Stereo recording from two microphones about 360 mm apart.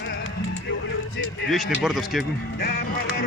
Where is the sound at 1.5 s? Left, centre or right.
Centre.